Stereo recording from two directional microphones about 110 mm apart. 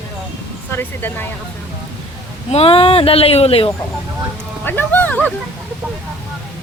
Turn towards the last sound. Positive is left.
turn(degrees=15)  # may be behind; listen again after turning